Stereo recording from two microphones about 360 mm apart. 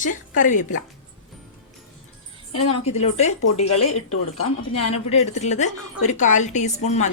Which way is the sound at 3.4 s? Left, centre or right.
Left.